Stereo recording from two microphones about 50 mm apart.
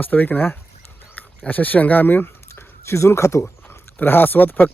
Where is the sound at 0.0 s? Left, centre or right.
Left.